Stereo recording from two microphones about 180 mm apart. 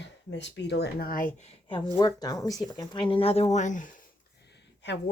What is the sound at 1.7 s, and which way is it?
Speech, 25° left (ahead or behind).